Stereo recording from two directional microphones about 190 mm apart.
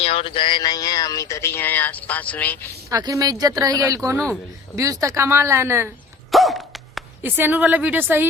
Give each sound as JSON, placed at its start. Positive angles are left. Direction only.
{"t": 0.0, "sound": "speech", "side_deg": 30}
{"t": 2.9, "sound": "a woman's voice", "side_deg": -20}
{"t": 6.3, "sound": "a sound", "side_deg": 0}
{"t": 7.2, "sound": "a woman's voice", "side_deg": -10}